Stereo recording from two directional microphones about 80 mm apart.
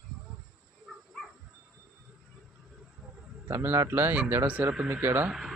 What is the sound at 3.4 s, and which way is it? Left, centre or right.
Speech, right.